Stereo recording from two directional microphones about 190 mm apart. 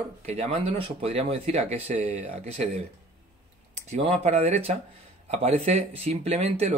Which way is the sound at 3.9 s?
35° right (ahead or behind).